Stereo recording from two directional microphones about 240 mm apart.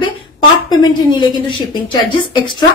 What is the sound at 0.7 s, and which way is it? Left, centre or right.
A woman's voice, centre.